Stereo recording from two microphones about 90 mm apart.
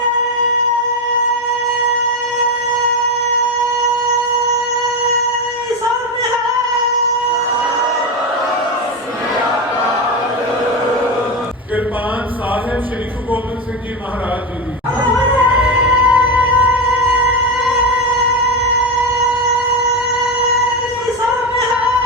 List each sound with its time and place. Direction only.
15.2 s music: 20° right (ahead or behind)